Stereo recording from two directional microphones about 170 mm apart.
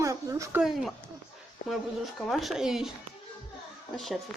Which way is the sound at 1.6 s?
50° left (ahead or behind).